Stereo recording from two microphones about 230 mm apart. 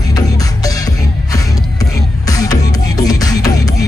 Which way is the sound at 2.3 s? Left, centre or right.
Centre.